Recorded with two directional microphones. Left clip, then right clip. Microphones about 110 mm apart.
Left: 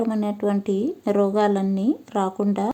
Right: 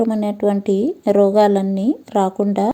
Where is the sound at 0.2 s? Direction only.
30° right (ahead or behind).